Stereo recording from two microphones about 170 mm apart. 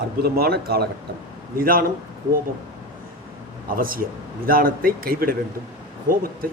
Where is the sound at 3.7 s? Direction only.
55° right (ahead or behind).